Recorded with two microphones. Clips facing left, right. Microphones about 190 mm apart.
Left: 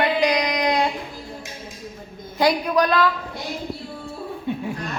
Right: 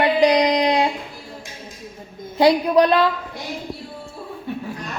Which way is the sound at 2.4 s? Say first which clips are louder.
Right 4 dB; 30° right (ahead or behind).